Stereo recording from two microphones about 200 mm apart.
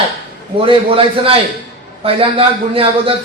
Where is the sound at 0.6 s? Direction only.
25° right (ahead or behind).